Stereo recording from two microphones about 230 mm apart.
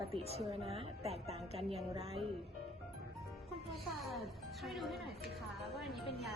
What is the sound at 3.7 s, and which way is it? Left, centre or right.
A child's voice, centre.